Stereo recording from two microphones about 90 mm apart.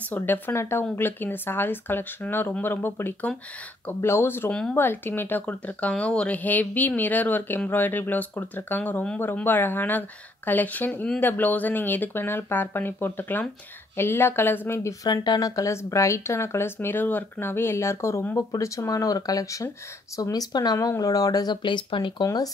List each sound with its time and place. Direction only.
0.1 s speech: 25° left (ahead or behind)
4.5 s speech: 10° left (ahead or behind)
4.7 s speech: 25° left (ahead or behind)
15.0 s speech: 50° left (ahead or behind)
22.2 s speech: 45° left (ahead or behind)